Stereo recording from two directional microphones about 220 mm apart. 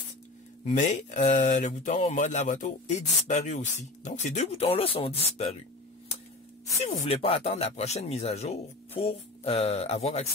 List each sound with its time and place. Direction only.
0.7 s speech: 35° left (ahead or behind)
6.8 s speech: 30° left (ahead or behind)